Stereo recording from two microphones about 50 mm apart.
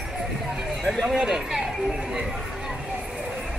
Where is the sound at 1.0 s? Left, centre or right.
Centre.